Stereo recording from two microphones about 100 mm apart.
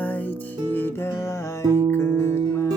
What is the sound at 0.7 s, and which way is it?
Music, 20° left (ahead or behind).